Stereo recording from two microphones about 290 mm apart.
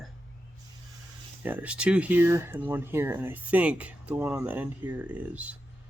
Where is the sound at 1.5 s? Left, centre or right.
Centre.